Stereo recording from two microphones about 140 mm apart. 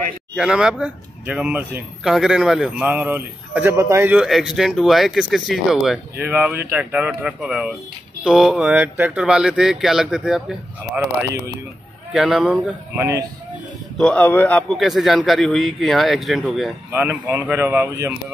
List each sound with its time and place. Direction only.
0.4 s speech: 5° right (ahead or behind)
4.3 s speech: centre (ahead or behind)
6.1 s speech: 10° right (ahead or behind)
12.1 s speech: 5° right (ahead or behind)
13.9 s a man's voice: 10° left (ahead or behind)
14.7 s speech: centre (ahead or behind)
16.9 s speech: 15° right (ahead or behind)